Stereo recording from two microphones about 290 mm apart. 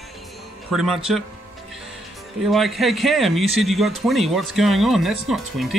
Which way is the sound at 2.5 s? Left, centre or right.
Centre.